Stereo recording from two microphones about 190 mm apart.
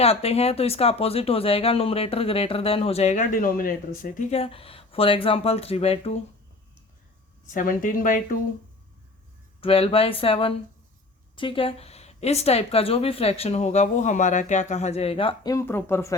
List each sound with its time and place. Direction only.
0.0 s speech: 35° left (ahead or behind)
7.5 s speech: 45° left (ahead or behind)
9.6 s speech: 30° left (ahead or behind); by 16.1 s 10° left (ahead or behind)